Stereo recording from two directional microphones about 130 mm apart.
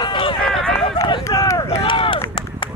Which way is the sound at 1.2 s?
25° left (ahead or behind).